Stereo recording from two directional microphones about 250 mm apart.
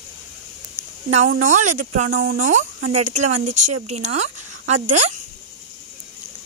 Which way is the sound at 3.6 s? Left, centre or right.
Right.